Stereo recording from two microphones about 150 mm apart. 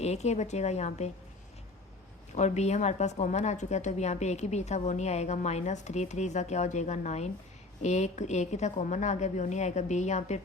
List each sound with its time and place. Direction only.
0.0 s a woman's voice: 45° left (ahead or behind)
2.3 s a woman's voice: 50° left (ahead or behind)